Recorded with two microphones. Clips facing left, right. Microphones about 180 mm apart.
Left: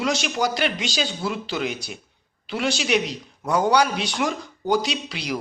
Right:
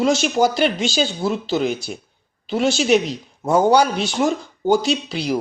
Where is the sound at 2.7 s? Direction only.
45° right (ahead or behind).